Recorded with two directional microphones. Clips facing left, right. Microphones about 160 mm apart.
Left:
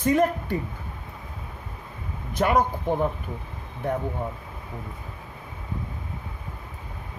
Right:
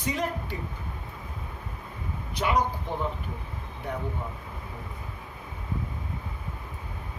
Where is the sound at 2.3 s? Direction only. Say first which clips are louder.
Left 5 dB; 50° left (ahead or behind).